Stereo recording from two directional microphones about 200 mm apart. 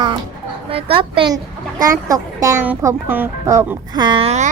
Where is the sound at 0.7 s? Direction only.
30° right (ahead or behind).